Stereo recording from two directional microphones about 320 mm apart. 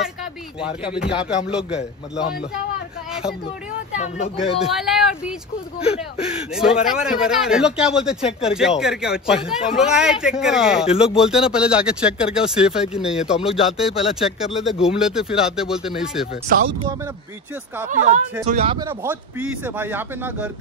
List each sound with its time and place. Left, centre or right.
0.0 s a sound: centre
1.5 s speech: centre
3.1 s a sound: centre
3.9 s speech: left
4.6 s speech: centre
16.4 s speech: right
17.8 s speech: right; by 20.5 s centre